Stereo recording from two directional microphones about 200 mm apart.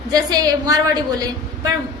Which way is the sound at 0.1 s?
20° right (ahead or behind).